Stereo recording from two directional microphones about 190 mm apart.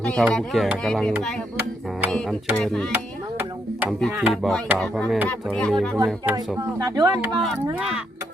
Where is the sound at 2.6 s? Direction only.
5° left (ahead or behind).